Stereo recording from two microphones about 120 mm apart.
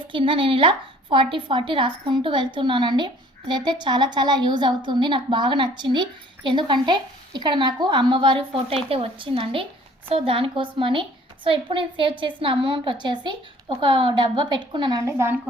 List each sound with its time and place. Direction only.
0.1 s a woman's voice: 45° right (ahead or behind)
15.0 s a woman's voice: 20° right (ahead or behind)